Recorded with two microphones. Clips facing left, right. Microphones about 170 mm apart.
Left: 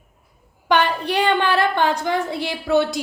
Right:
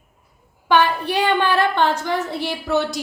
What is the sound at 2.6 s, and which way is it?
Speech, 55° left (ahead or behind).